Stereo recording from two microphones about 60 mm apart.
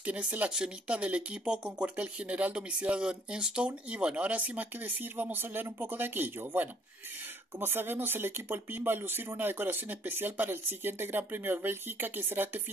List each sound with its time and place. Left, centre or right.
0.0 s speech: right